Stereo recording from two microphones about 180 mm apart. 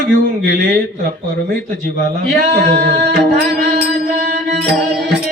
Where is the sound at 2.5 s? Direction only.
60° right (ahead or behind).